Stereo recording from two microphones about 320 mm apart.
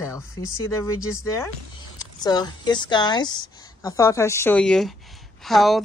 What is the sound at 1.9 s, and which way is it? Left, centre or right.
Speech, centre.